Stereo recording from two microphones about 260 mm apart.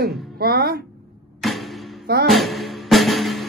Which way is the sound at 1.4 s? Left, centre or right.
Centre.